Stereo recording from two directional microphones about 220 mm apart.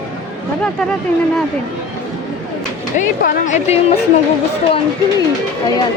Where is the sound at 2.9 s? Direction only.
35° left (ahead or behind).